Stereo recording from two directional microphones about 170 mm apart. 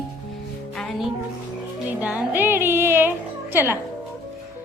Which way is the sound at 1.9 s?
10° right (ahead or behind).